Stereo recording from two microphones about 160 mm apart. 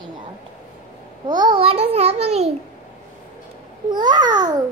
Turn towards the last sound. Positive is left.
turn(degrees=-25)  # may be behind; listen again after turning